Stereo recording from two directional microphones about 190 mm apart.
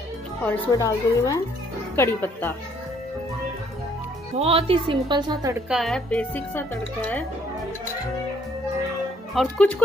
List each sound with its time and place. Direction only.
0.7 s speech: 20° left (ahead or behind)
4.4 s a woman's voice: 30° right (ahead or behind)
5.7 s speech: centre (ahead or behind)
9.3 s speech: 5° left (ahead or behind)